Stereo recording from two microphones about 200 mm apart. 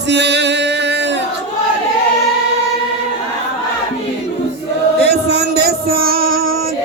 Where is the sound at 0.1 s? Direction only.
60° right (ahead or behind).